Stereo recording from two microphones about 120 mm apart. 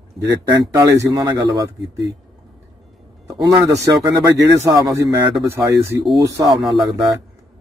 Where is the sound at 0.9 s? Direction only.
25° right (ahead or behind).